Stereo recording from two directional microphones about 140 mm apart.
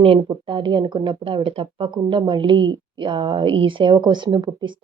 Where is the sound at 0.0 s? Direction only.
40° right (ahead or behind).